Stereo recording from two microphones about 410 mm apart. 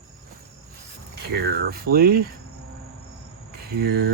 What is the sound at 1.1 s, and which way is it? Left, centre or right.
Speech, right.